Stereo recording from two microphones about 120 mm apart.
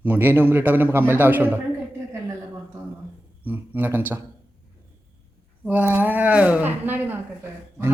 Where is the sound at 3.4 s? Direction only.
15° right (ahead or behind).